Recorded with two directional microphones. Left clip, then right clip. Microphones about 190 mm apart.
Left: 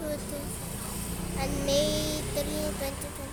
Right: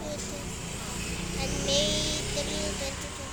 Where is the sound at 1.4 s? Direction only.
30° left (ahead or behind).